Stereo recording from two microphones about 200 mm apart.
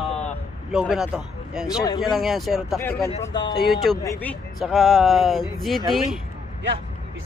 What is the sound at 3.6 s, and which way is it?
Speech, centre (ahead or behind).